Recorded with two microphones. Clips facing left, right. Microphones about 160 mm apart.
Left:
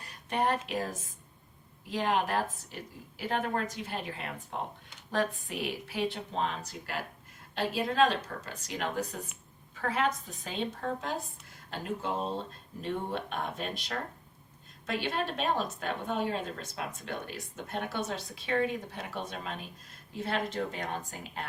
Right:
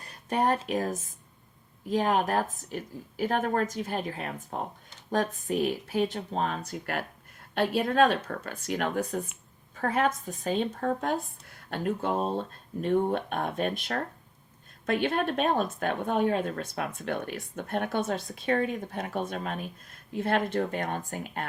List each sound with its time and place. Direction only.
0.0 s a woman's voice: 45° right (ahead or behind)